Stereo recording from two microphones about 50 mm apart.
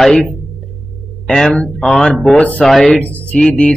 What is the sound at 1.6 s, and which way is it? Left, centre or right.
Speech, left.